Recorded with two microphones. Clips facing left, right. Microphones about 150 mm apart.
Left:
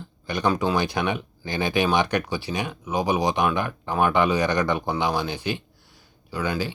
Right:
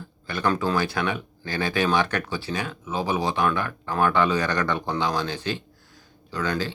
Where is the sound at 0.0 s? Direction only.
15° left (ahead or behind).